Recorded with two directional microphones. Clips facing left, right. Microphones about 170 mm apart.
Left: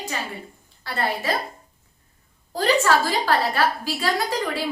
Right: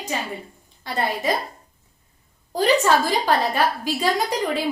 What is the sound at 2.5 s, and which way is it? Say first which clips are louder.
A woman's voice: right 2 dB; 15° right (ahead or behind).